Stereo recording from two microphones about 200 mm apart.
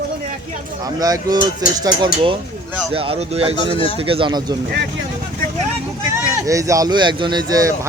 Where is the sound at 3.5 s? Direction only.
25° left (ahead or behind).